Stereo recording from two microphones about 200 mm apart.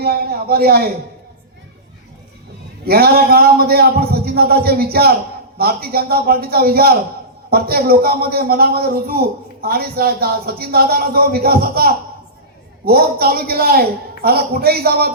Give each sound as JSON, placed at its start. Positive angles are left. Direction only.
{"t": 0.0, "sound": "a man's voice", "side_deg": -50}
{"t": 2.8, "sound": "a man's voice", "side_deg": -50}